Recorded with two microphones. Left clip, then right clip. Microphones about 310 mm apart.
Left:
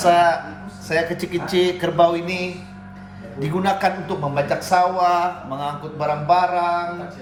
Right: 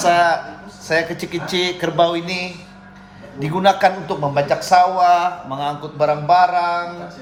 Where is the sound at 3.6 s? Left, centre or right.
Right.